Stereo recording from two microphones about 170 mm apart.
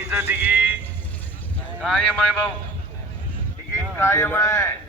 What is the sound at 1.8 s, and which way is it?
Speech, centre (ahead or behind).